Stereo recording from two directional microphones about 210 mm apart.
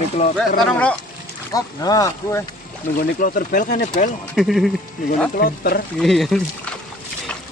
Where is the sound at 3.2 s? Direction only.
40° left (ahead or behind).